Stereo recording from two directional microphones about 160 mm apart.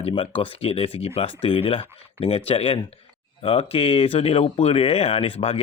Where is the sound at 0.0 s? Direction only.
35° left (ahead or behind).